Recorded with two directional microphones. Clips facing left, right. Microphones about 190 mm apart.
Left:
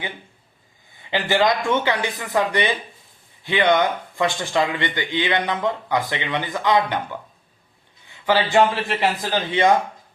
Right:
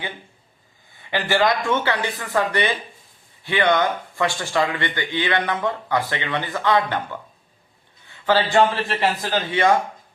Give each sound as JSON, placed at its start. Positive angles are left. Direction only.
{"t": 1.1, "sound": "speech", "side_deg": 20}